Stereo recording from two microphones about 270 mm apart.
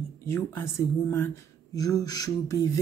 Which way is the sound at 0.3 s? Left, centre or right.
Centre.